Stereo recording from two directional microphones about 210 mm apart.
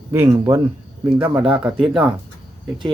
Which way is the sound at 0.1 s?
15° right (ahead or behind).